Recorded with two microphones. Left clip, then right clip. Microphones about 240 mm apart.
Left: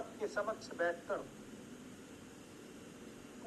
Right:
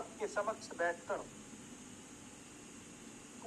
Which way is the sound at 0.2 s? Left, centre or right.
Centre.